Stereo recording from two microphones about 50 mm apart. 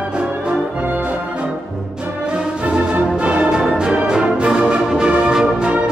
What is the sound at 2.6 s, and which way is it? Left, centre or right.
Music, right.